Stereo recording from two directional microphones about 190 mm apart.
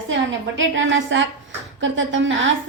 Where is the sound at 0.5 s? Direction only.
75° right (ahead or behind).